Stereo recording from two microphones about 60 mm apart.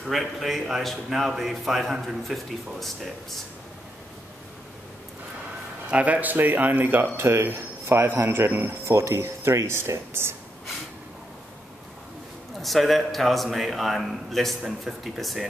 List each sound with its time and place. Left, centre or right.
0.0 s a man's voice: centre
5.9 s speech: right
8.2 s speech: right
8.8 s speech: right
12.6 s a man's voice: centre